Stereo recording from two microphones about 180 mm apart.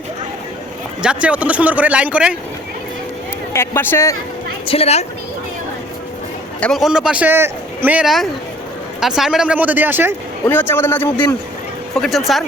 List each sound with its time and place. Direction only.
1.0 s speech: 5° right (ahead or behind)
3.5 s a man's voice: 15° left (ahead or behind)
4.6 s a woman's voice: 30° left (ahead or behind)
6.6 s speech: centre (ahead or behind)
10.4 s a man's voice: 10° left (ahead or behind)
11.9 s speech: centre (ahead or behind)